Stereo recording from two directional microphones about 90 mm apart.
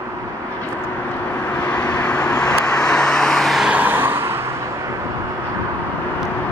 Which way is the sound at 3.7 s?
20° right (ahead or behind).